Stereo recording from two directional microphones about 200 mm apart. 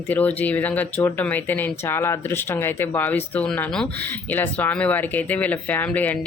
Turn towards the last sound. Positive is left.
turn(degrees=10)  # may be behind; listen again after turning